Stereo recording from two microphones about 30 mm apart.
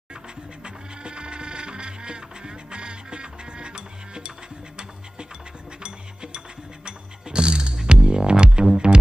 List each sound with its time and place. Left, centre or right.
0.7 s music: right
5.8 s music: right